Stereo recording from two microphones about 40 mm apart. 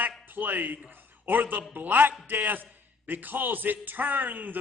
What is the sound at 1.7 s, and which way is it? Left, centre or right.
A man's voice, right.